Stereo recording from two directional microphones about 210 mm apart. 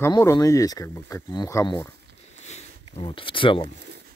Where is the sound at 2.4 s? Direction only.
30° left (ahead or behind).